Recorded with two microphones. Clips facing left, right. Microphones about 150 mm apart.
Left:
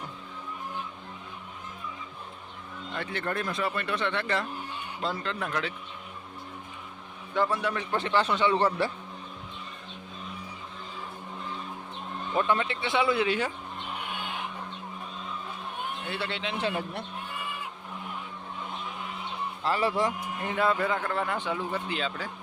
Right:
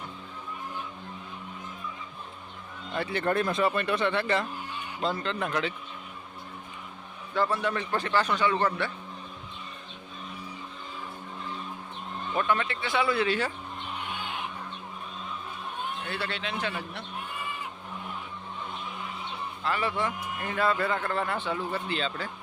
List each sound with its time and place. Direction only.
2.9 s speech: 10° right (ahead or behind)
3.2 s speech: 25° right (ahead or behind)
3.9 s speech: 5° right (ahead or behind)
7.3 s speech: 10° left (ahead or behind); by 8.9 s 30° left (ahead or behind)
12.5 s speech: 25° left (ahead or behind)
16.0 s speech: 20° left (ahead or behind)
19.6 s a man's voice: 35° left (ahead or behind)
20.4 s speech: 20° left (ahead or behind)